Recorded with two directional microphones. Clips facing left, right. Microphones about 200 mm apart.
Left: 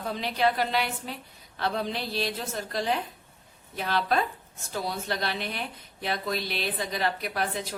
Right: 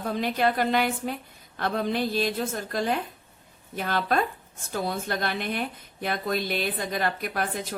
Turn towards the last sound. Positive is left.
turn(degrees=-50)  # may be behind; listen again after turning